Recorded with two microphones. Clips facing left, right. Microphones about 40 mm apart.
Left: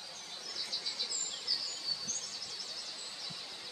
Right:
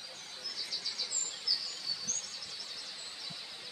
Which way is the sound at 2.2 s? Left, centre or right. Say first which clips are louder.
Even; right.